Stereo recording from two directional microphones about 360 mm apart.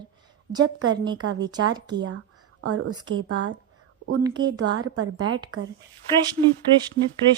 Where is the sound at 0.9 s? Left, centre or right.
Centre.